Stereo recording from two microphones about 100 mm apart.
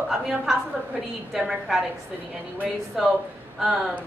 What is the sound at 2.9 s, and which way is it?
Speech, 5° right (ahead or behind).